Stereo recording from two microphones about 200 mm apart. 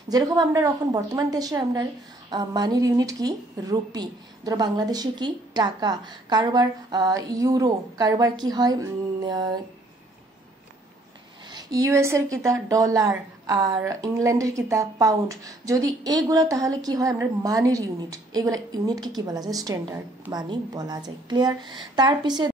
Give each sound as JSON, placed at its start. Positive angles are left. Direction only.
{"t": 0.1, "sound": "speech", "side_deg": -15}
{"t": 11.5, "sound": "speech", "side_deg": -15}